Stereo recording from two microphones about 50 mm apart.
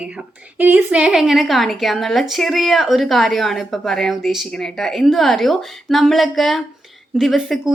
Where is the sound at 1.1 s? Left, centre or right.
Centre.